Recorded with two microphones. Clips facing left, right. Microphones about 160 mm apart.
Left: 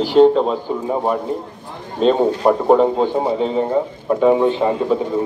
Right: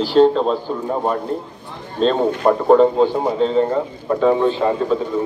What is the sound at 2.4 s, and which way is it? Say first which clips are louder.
A man's voice: right 2 dB; 15° left (ahead or behind).